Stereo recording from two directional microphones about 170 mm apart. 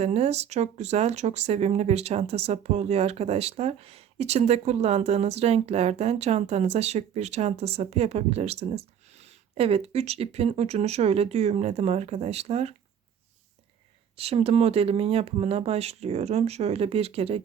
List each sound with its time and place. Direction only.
0.0 s speech: 40° right (ahead or behind)
14.2 s speech: 35° right (ahead or behind)